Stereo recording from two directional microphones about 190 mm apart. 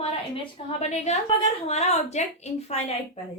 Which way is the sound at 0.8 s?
35° left (ahead or behind).